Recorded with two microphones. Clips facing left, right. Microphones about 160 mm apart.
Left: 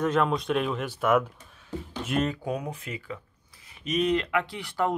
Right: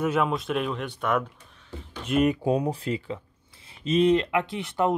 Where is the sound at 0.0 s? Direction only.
5° right (ahead or behind).